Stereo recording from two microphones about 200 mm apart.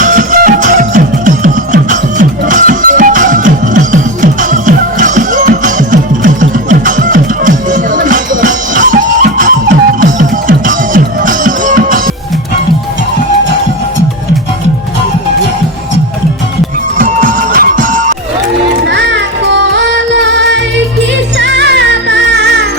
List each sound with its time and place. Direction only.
0.0 s music: 40° right (ahead or behind)
17.0 s music: 40° right (ahead or behind)
18.9 s music: 60° right (ahead or behind)